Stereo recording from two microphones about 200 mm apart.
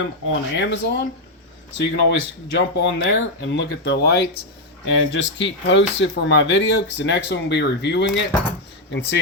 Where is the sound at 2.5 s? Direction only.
65° left (ahead or behind).